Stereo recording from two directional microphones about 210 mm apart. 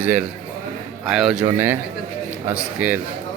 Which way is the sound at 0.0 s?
5° right (ahead or behind).